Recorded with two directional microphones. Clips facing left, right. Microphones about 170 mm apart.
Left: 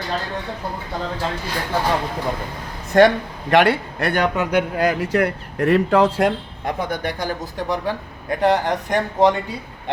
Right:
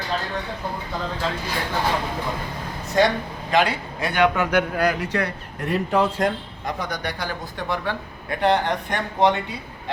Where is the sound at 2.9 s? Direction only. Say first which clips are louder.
Left 6 dB; 55° left (ahead or behind).